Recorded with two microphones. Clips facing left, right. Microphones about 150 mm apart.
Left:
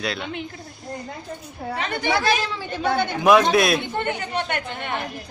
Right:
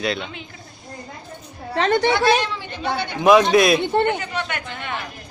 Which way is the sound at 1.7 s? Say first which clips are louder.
Right 10 dB; 75° right (ahead or behind).